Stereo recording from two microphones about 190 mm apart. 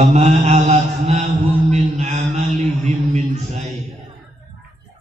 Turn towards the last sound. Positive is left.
turn(degrees=-35)  # may be behind; listen again after turning